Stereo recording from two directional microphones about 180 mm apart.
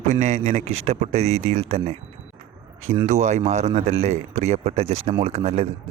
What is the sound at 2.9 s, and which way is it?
Speech, 45° right (ahead or behind).